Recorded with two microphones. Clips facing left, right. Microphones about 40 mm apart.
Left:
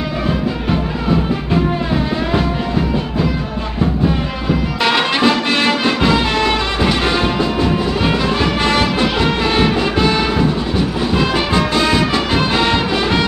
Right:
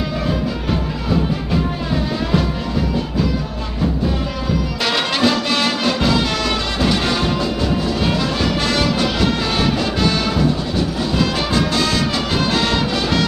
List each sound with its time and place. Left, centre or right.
2.3 s music: left
4.5 s music: left
7.6 s music: left